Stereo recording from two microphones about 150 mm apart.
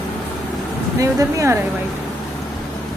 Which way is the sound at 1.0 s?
20° right (ahead or behind).